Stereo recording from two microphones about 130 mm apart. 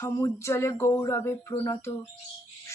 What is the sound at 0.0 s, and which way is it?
Speech, 25° left (ahead or behind).